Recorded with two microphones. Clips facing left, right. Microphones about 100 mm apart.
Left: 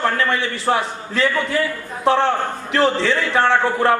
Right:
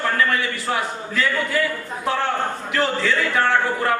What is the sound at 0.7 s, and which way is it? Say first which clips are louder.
Speech: left 6 dB; 45° left (ahead or behind).